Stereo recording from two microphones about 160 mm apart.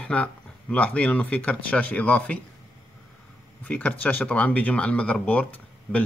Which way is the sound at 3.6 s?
10° left (ahead or behind).